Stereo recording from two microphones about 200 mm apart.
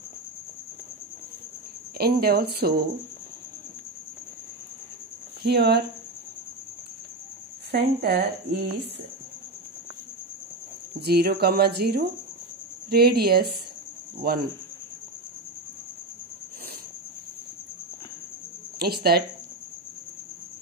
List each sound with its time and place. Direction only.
2.0 s speech: 50° right (ahead or behind)
5.4 s speech: 55° right (ahead or behind)
7.7 s speech: 55° right (ahead or behind)
11.0 s speech: 55° right (ahead or behind)
18.8 s speech: 50° right (ahead or behind)